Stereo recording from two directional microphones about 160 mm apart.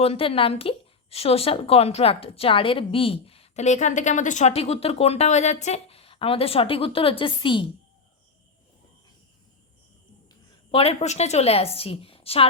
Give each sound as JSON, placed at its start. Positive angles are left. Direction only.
{"t": 0.0, "sound": "a woman's voice", "side_deg": 35}
{"t": 10.7, "sound": "a woman's voice", "side_deg": 35}